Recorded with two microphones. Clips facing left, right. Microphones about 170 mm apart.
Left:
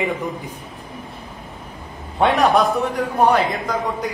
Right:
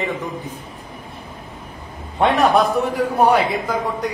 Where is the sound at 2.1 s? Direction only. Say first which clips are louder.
Even; centre (ahead or behind).